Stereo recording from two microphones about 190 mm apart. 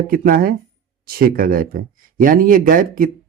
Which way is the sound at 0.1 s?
50° right (ahead or behind).